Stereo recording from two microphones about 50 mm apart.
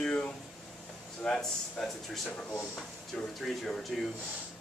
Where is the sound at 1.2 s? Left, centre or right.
Centre.